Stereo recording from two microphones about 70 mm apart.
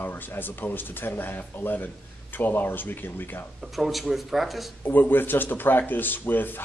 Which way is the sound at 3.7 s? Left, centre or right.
Centre.